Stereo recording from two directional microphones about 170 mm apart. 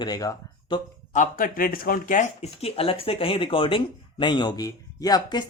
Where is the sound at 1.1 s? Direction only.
50° left (ahead or behind).